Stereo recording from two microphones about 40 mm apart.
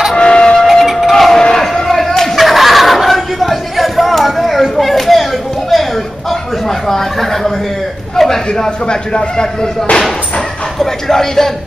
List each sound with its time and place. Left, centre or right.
0.1 s music: left
0.7 s a sound: centre
1.1 s crowd: centre
6.9 s a sound: centre
8.6 s a man's voice: left
10.8 s speech: centre